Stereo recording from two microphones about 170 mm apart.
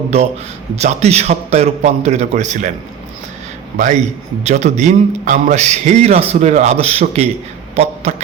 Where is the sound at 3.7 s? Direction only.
45° right (ahead or behind).